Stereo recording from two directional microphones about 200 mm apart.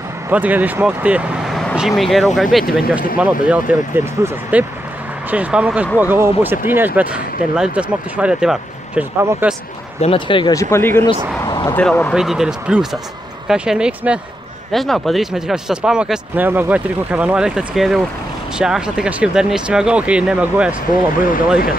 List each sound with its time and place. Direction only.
0.3 s speech: 10° right (ahead or behind)
10.0 s speech: 25° left (ahead or behind)
11.4 s vehicle: 20° left (ahead or behind)
11.7 s speech: 10° left (ahead or behind)